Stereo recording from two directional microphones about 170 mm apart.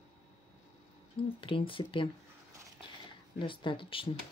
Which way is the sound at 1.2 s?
30° left (ahead or behind).